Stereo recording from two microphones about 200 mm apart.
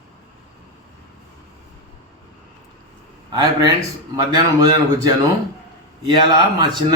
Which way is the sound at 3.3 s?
20° right (ahead or behind).